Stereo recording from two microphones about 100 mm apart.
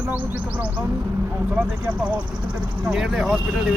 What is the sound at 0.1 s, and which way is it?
Speech, 15° right (ahead or behind).